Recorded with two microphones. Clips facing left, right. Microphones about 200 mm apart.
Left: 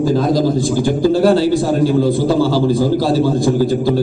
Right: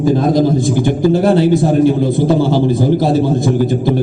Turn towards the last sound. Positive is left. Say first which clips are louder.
# even
turn(degrees=-20)  # may be behind; listen again after turning